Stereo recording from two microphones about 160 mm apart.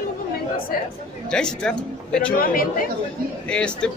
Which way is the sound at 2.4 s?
65° left (ahead or behind).